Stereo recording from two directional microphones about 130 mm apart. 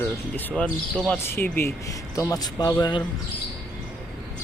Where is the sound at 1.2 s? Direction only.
15° left (ahead or behind); by 3.0 s 35° left (ahead or behind).